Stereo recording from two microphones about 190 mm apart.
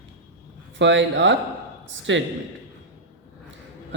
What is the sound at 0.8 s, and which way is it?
Speech, 75° right (ahead or behind).